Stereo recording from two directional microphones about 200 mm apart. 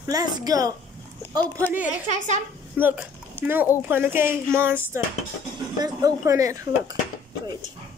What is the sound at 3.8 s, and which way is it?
Speech, 10° right (ahead or behind).